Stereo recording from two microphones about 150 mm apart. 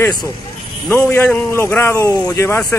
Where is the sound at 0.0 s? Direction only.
25° left (ahead or behind).